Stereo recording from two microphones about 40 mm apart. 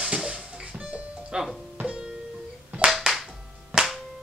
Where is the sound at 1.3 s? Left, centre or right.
Centre.